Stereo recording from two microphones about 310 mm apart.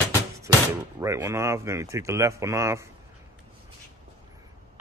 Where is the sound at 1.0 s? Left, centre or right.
Centre.